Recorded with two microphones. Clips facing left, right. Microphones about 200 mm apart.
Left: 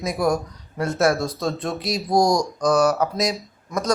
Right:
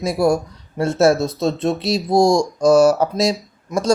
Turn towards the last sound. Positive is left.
turn(degrees=-30)  # may be behind; listen again after turning